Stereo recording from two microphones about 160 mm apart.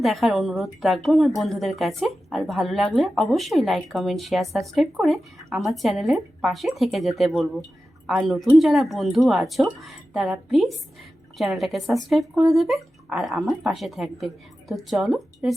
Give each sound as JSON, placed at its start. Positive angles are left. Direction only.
{"t": 0.0, "sound": "speech", "side_deg": 0}